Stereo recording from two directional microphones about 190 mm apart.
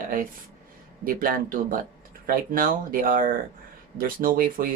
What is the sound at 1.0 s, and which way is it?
Speech, 50° right (ahead or behind).